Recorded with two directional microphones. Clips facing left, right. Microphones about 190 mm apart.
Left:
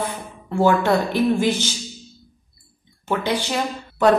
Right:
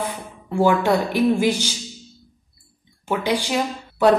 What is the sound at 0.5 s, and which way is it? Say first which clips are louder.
A woman's voice: even; 10° right (ahead or behind).